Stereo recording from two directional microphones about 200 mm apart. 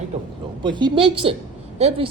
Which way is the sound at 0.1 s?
35° right (ahead or behind).